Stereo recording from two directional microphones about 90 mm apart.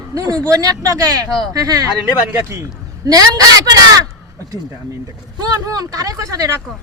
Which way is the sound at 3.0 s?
40° right (ahead or behind).